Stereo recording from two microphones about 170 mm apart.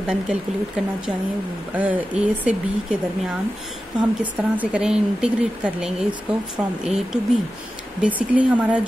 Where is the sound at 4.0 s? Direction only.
10° right (ahead or behind).